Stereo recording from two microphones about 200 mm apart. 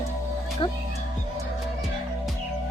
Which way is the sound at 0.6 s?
25° left (ahead or behind).